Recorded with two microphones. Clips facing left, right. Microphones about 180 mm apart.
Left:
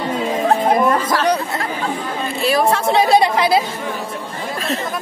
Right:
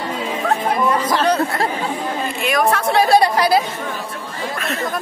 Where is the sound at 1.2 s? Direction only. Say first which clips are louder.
Right 1 dB; 15° left (ahead or behind).